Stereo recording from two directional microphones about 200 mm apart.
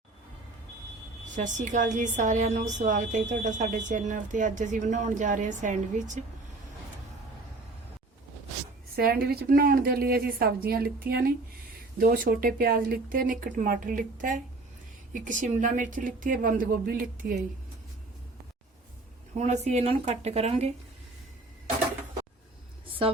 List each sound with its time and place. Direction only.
1.4 s a woman's voice: 40° right (ahead or behind)
9.0 s a woman's voice: 50° right (ahead or behind)
19.4 s a woman's voice: 35° right (ahead or behind)